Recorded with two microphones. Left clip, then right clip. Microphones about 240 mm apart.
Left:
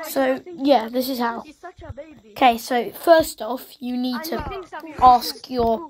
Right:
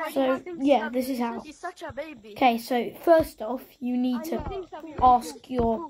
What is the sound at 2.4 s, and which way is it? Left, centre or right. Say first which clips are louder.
A woman's voice: left 5 dB; centre.